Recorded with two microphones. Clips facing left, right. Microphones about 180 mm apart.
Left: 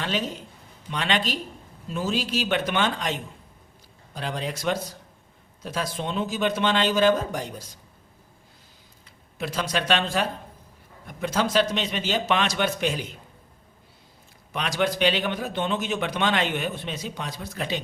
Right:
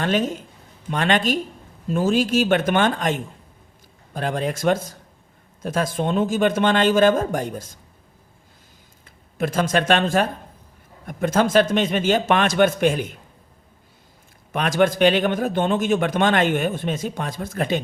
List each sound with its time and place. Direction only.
0.0 s a man's voice: 50° right (ahead or behind)
9.4 s a man's voice: 50° right (ahead or behind)
14.5 s a man's voice: 50° right (ahead or behind)